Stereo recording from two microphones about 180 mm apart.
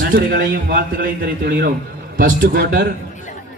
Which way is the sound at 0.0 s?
55° right (ahead or behind).